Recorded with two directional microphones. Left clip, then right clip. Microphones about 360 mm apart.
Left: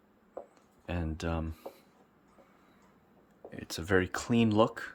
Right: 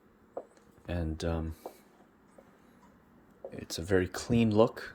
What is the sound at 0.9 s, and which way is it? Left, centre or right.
Speech, centre.